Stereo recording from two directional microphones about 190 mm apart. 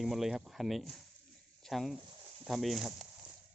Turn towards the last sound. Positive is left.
turn(degrees=0)  # may be behind; listen again after turning